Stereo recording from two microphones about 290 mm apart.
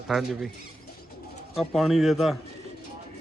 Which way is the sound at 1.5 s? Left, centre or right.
Centre.